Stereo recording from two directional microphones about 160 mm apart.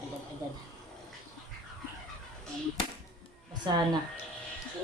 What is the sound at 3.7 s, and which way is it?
Speech, 25° right (ahead or behind).